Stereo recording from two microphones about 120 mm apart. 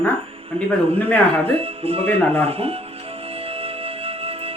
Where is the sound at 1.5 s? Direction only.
55° right (ahead or behind).